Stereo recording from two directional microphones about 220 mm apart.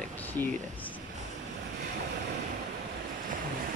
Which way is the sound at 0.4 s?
10° left (ahead or behind).